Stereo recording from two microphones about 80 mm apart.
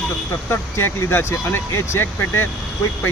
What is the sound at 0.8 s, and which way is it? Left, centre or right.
Speech, left.